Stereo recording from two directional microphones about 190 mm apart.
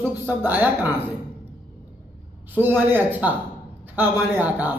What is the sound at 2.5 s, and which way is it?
A man's voice, 10° right (ahead or behind).